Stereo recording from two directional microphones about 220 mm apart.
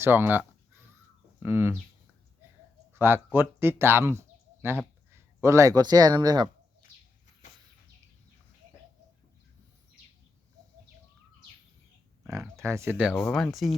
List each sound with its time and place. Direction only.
0.0 s a sound: 10° right (ahead or behind)
1.4 s speech: 10° right (ahead or behind)
2.9 s speech: 10° right (ahead or behind)
4.2 s a sound: 10° right (ahead or behind)
5.1 s speech: 15° right (ahead or behind)
12.2 s speech: 10° right (ahead or behind)